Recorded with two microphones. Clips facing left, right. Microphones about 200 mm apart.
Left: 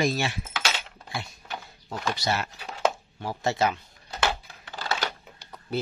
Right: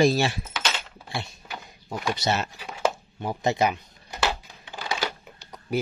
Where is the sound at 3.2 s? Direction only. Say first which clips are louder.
Right 2 dB; 15° right (ahead or behind).